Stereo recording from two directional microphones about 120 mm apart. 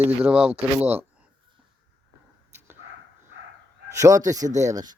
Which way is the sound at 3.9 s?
30° right (ahead or behind).